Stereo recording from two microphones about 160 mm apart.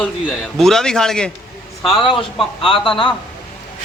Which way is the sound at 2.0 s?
35° left (ahead or behind).